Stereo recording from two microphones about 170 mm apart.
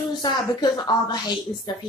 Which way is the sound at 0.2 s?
25° left (ahead or behind).